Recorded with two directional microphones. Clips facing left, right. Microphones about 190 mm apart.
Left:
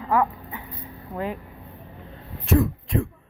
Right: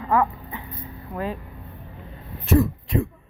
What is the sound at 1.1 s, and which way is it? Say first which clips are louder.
Speech: even; 20° left (ahead or behind).